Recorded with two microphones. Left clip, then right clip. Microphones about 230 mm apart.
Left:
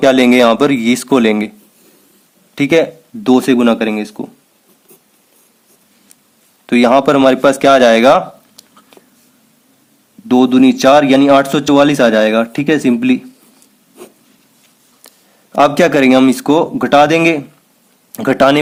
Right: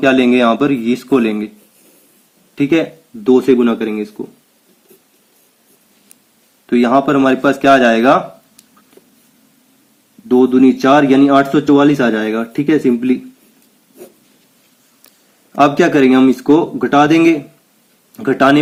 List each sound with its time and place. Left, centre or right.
0.0 s a man's voice: left
2.6 s a man's voice: left
6.7 s a man's voice: left
10.2 s a man's voice: left
15.5 s a man's voice: left